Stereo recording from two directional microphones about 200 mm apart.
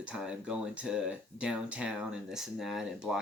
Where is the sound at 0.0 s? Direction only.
5° right (ahead or behind).